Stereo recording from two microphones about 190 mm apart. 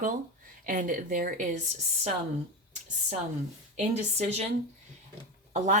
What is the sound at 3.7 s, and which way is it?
Speech, 35° right (ahead or behind).